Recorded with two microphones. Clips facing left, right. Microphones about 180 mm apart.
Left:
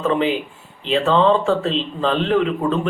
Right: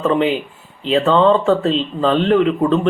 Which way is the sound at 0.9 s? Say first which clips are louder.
Right 3 dB; centre (ahead or behind).